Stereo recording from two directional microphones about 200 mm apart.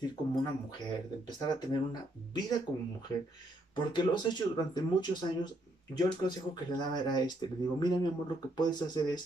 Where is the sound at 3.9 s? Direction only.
20° left (ahead or behind).